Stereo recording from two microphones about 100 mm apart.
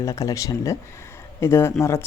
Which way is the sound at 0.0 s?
30° left (ahead or behind).